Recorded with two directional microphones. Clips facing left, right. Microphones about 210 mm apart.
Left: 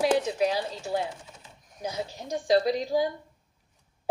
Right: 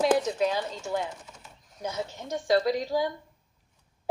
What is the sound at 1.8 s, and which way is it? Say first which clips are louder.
Speech: even; 35° left (ahead or behind).